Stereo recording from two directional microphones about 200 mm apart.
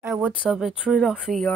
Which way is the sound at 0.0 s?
10° right (ahead or behind).